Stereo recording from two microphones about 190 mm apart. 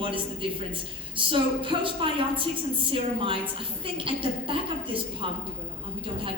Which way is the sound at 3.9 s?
25° right (ahead or behind).